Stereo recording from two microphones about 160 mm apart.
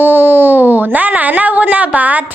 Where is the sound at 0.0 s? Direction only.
10° right (ahead or behind).